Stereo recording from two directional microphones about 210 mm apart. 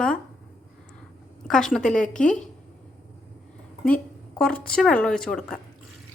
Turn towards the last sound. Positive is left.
turn(degrees=0)  # may be behind; listen again after turning